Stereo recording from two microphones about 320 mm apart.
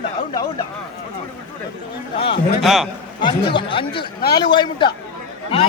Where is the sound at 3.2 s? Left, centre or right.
Centre.